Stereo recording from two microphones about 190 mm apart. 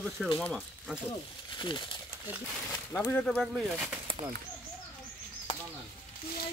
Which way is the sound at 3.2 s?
5° left (ahead or behind).